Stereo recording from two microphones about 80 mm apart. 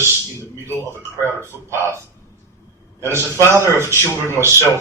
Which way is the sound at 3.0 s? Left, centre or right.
Right.